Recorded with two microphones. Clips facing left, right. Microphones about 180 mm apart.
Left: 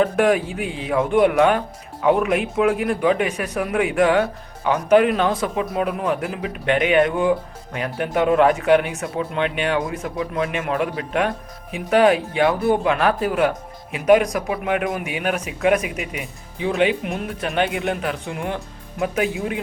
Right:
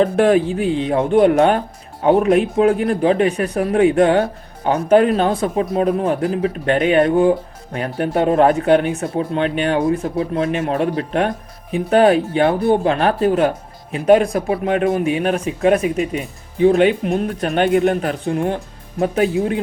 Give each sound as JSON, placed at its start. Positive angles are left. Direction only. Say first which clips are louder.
{"t": 0.0, "sound": "speech", "louder": "right 4 dB", "side_deg": -35}